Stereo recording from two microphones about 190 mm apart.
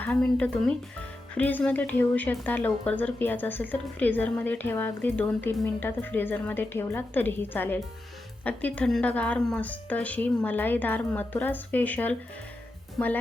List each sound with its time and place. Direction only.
0.0 s speech: 5° left (ahead or behind)